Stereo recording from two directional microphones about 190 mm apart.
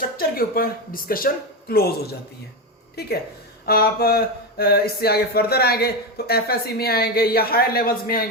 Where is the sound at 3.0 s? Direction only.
55° left (ahead or behind).